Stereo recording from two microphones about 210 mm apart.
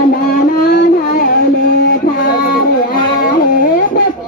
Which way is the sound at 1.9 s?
40° left (ahead or behind).